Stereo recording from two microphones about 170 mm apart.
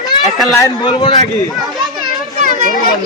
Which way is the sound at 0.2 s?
Centre (ahead or behind).